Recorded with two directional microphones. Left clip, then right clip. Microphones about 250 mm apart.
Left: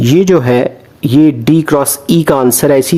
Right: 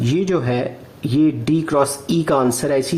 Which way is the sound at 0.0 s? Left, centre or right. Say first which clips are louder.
Left 11 dB; left.